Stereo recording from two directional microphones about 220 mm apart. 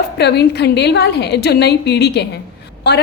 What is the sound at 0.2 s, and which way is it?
A woman's voice, 50° left (ahead or behind).